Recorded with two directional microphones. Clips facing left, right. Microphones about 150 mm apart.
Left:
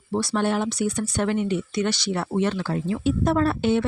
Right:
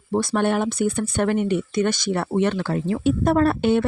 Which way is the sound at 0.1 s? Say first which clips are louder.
Right 3 dB; 50° right (ahead or behind).